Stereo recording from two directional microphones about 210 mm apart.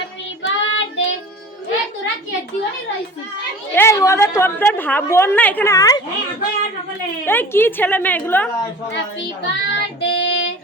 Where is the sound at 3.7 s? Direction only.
10° left (ahead or behind).